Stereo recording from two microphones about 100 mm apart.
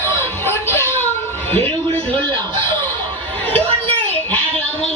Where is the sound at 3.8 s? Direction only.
20° left (ahead or behind).